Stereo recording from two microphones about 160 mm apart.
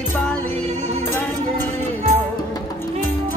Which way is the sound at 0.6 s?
45° right (ahead or behind).